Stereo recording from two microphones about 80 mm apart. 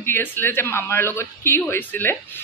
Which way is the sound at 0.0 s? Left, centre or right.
Left.